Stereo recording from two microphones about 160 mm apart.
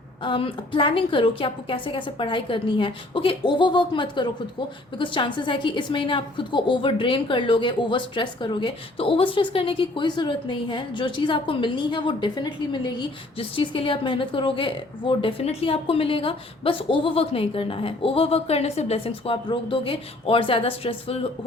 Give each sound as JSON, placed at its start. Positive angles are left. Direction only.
{"t": 0.2, "sound": "a woman's voice", "side_deg": 30}